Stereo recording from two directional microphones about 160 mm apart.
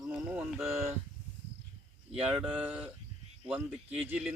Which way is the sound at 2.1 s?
5° right (ahead or behind).